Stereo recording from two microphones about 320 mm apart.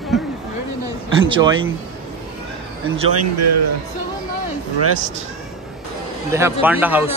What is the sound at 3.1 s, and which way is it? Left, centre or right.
Speech, right.